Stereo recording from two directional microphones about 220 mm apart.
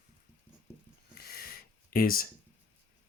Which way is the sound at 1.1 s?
45° left (ahead or behind).